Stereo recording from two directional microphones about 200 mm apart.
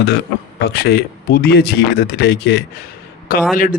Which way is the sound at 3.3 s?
45° left (ahead or behind).